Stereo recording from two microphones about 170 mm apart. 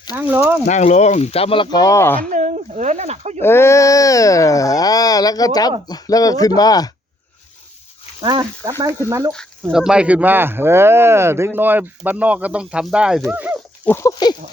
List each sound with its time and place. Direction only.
0.2 s speech: 10° right (ahead or behind)
0.7 s speech: 45° left (ahead or behind); by 2.2 s 15° left (ahead or behind)
2.3 s speech: 45° right (ahead or behind)
3.4 s speech: 15° left (ahead or behind)
8.2 s speech: 25° right (ahead or behind)
9.6 s speech: 5° right (ahead or behind)
13.8 s speech: 15° left (ahead or behind)